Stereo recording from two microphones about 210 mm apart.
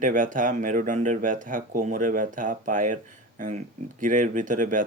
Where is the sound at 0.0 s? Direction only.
40° right (ahead or behind).